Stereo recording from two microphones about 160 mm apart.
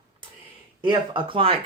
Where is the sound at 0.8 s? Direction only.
30° right (ahead or behind).